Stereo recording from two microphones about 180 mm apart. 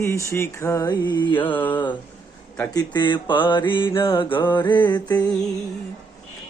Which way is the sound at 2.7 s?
25° left (ahead or behind).